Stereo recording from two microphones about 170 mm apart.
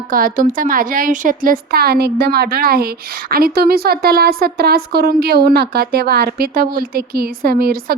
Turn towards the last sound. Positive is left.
turn(degrees=-60)  # may be behind; listen again after turning